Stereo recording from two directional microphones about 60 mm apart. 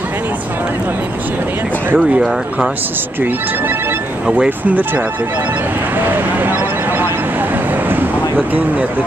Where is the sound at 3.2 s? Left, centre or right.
Right.